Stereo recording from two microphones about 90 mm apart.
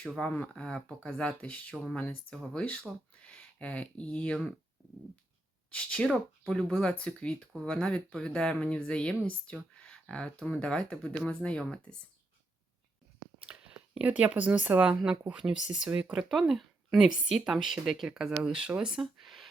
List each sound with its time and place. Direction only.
0.0 s speech: 10° left (ahead or behind)
5.7 s speech: 10° left (ahead or behind)
13.4 s speech: 10° right (ahead or behind)
16.3 s a woman's voice: 5° right (ahead or behind)
18.7 s a sound: 5° right (ahead or behind)